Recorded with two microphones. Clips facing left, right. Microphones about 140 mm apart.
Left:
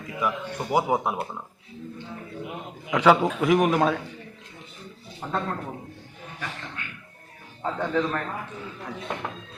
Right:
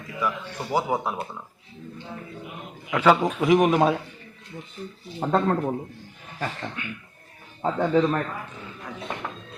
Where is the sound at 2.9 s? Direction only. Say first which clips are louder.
Left 1 dB; 10° left (ahead or behind).